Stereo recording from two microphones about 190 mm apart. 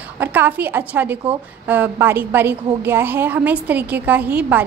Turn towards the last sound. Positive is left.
turn(degrees=-10)  # may be behind; listen again after turning